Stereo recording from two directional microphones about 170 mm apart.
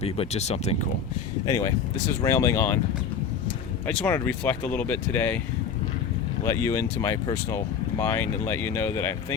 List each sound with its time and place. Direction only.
0.0 s speech: 40° left (ahead or behind)
1.5 s speech: 20° left (ahead or behind)
3.8 s speech: 10° left (ahead or behind)
6.4 s speech: 15° left (ahead or behind)